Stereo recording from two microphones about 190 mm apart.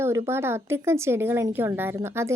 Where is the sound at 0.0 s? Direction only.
15° right (ahead or behind).